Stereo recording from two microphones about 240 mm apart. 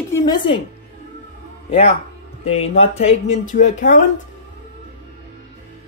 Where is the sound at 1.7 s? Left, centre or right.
Left.